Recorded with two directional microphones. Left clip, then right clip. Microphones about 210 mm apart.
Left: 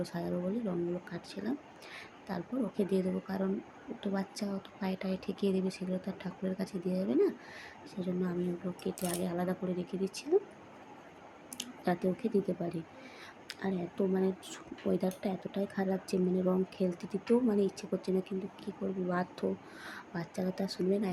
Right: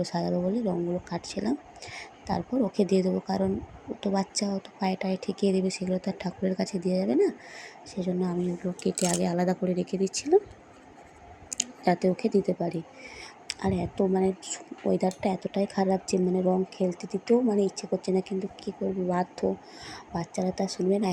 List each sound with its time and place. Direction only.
0.0 s speech: 25° right (ahead or behind)
11.5 s speech: 20° right (ahead or behind)